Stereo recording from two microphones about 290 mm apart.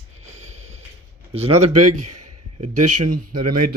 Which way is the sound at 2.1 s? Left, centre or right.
Right.